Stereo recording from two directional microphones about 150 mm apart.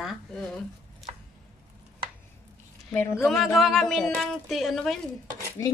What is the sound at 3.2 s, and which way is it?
A woman's voice, centre (ahead or behind).